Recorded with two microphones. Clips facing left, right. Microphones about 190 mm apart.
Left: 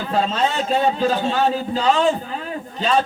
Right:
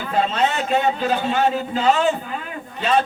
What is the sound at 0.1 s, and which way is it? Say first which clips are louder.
Speech: right 1 dB; 35° left (ahead or behind).